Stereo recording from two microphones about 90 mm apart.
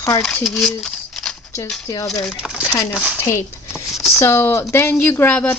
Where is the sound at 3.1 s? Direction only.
30° left (ahead or behind).